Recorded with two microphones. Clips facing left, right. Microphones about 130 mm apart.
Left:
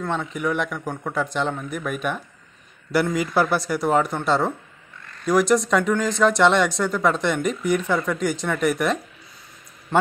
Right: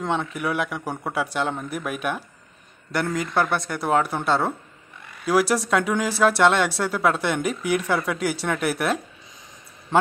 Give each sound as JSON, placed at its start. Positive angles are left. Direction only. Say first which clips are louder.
{"t": 0.0, "sound": "a man's voice", "louder": "right 1 dB", "side_deg": -20}
{"t": 0.3, "sound": "a man's voice", "louder": "left 1 dB", "side_deg": -10}